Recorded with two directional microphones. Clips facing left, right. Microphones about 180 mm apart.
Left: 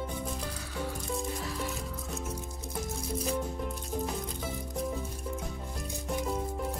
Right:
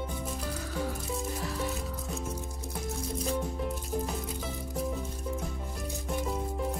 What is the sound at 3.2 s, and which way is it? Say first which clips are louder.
Music: even; centre (ahead or behind).